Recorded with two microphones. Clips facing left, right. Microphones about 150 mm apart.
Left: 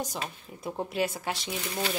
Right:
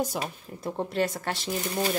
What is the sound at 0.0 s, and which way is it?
Speech, 10° right (ahead or behind).